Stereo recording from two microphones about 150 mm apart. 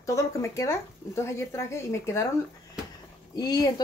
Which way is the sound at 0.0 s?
20° left (ahead or behind).